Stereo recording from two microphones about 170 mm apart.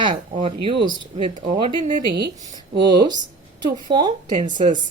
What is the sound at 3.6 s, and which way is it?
Speech, 25° right (ahead or behind).